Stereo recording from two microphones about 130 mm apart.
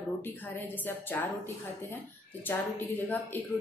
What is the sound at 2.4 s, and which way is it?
Speech, 15° left (ahead or behind).